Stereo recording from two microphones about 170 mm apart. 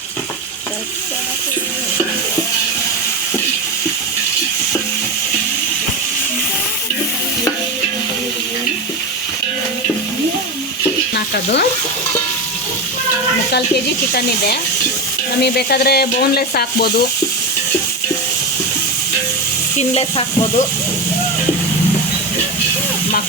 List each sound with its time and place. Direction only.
14.1 s sizzle: 65° left (ahead or behind)
19.9 s stir: 35° left (ahead or behind)